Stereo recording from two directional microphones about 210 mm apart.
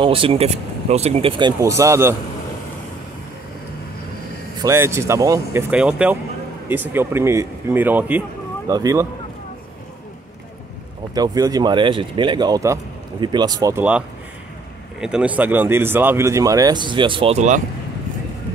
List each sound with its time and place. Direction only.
0.0 s speech: 25° right (ahead or behind)
1.6 s speech: 15° right (ahead or behind)
4.6 s speech: 15° right (ahead or behind)
11.1 s speech: 20° right (ahead or behind)